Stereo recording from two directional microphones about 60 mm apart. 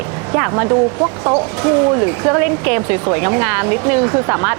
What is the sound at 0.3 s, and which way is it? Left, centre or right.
Speech, right.